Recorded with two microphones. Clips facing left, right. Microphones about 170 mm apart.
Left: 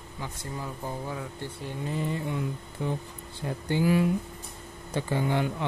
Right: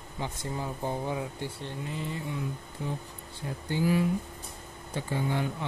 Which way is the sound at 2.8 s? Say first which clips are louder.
Left 4 dB; 65° left (ahead or behind).